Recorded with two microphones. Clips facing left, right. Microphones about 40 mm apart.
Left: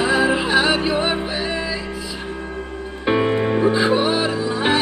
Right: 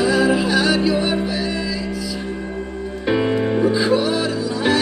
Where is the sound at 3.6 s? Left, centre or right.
Left.